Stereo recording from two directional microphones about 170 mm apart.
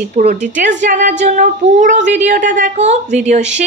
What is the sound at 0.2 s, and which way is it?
A woman's voice, 40° right (ahead or behind).